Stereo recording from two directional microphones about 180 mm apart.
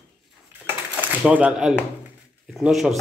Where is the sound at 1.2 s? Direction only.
5° right (ahead or behind).